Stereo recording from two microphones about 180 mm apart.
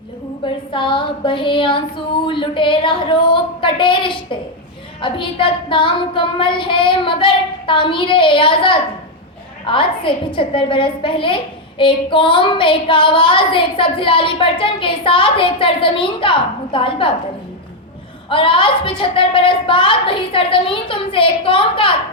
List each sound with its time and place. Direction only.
0.4 s a woman's voice: 25° left (ahead or behind)
18.3 s a woman's voice: 30° left (ahead or behind)